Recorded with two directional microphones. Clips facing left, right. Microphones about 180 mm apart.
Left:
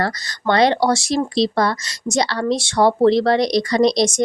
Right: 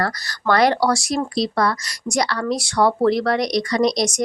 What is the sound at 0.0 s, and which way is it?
Speech, 20° left (ahead or behind).